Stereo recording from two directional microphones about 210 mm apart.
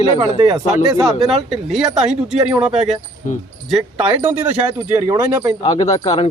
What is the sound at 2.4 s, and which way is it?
Speech, 5° right (ahead or behind).